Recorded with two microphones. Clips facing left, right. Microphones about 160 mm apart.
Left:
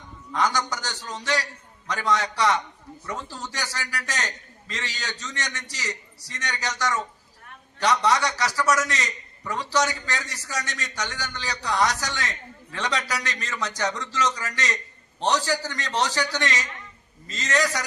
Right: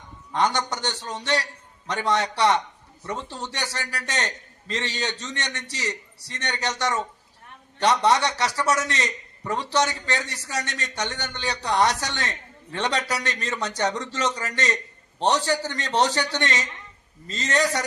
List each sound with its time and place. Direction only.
0.3 s a man's voice: 30° right (ahead or behind)
5.5 s a man's voice: 60° right (ahead or behind)
5.8 s a man's voice: 25° right (ahead or behind)